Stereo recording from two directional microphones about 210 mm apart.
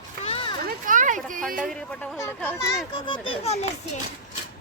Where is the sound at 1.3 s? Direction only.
40° right (ahead or behind).